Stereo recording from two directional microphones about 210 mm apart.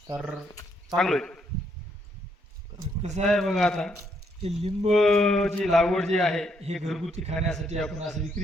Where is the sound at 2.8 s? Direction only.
35° right (ahead or behind).